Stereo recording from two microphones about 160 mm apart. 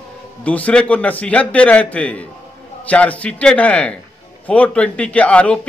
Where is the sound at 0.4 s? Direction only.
10° left (ahead or behind).